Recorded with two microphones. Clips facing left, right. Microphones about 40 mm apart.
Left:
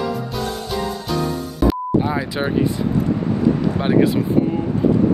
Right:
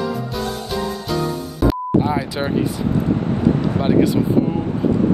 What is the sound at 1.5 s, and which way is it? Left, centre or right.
Music, centre.